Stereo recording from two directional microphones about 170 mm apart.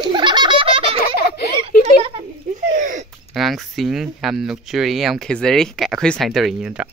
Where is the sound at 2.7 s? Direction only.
45° right (ahead or behind).